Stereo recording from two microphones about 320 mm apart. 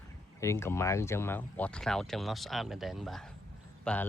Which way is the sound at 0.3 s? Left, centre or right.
Centre.